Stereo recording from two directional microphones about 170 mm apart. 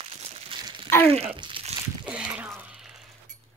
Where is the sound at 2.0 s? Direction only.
5° right (ahead or behind).